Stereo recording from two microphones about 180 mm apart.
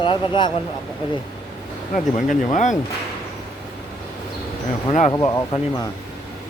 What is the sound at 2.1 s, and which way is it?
Speech, 45° left (ahead or behind).